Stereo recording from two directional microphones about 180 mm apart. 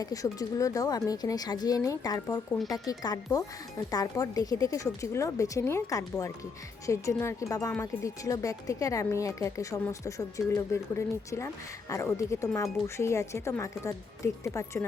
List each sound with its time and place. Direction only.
0.0 s speech: 20° left (ahead or behind)